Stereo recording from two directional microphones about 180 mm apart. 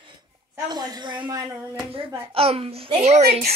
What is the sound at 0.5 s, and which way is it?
A woman's voice, 20° right (ahead or behind).